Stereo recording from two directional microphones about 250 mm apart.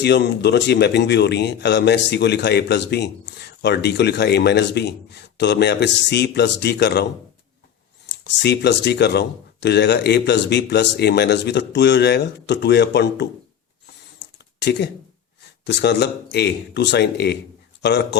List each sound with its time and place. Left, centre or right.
0.0 s speech: left
8.1 s speech: left
14.6 s speech: left